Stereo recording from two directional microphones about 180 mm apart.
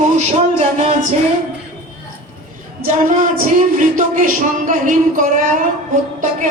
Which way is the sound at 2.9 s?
50° right (ahead or behind).